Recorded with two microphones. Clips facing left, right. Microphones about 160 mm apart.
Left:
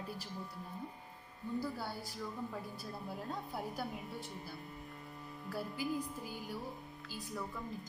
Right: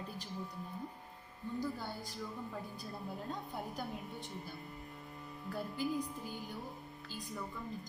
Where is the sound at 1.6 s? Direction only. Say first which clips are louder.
Right 1 dB; 10° left (ahead or behind).